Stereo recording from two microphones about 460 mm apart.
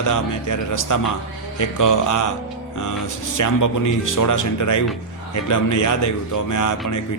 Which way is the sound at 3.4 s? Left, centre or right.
Left.